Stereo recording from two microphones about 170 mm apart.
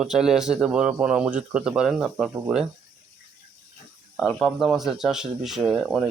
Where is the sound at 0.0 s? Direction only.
5° right (ahead or behind).